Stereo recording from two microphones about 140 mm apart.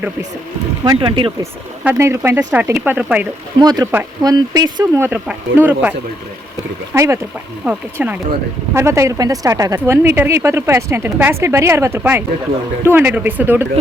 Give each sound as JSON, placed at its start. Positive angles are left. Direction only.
{"t": 0.9, "sound": "speech", "side_deg": -35}
{"t": 1.8, "sound": "speech", "side_deg": -15}
{"t": 3.6, "sound": "speech", "side_deg": -30}
{"t": 4.9, "sound": "speech", "side_deg": -10}
{"t": 6.9, "sound": "speech", "side_deg": -20}